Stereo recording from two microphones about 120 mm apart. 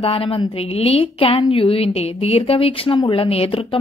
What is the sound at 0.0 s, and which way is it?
A woman's voice, 50° left (ahead or behind).